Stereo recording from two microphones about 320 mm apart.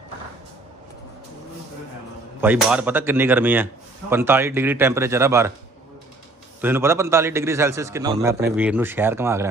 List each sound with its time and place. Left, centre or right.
2.4 s speech: centre
6.6 s speech: centre